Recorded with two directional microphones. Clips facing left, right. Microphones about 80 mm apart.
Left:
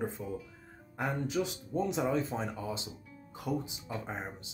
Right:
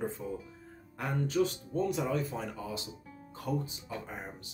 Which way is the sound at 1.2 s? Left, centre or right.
Centre.